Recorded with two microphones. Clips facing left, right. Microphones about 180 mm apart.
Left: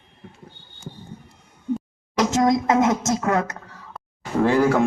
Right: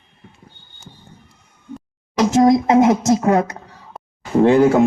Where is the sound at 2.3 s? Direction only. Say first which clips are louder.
Right 7 dB; 25° right (ahead or behind).